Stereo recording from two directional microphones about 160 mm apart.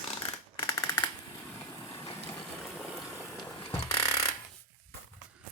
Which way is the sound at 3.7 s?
20° left (ahead or behind).